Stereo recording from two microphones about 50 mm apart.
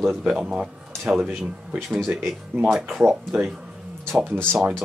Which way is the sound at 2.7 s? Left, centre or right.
Centre.